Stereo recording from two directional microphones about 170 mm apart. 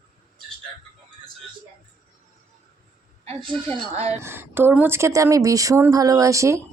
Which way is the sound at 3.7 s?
35° right (ahead or behind).